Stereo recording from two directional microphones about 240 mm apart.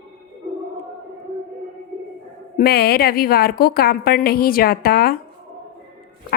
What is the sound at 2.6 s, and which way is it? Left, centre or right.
A woman's voice, left.